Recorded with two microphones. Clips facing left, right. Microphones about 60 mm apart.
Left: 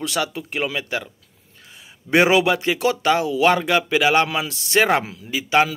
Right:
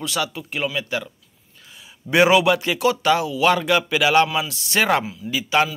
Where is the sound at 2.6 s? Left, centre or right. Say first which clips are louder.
Even; left.